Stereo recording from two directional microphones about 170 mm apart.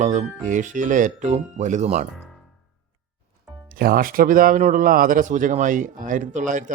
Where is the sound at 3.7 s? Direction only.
60° right (ahead or behind).